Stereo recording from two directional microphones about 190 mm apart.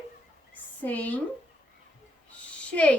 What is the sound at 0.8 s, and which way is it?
Speech, 10° left (ahead or behind).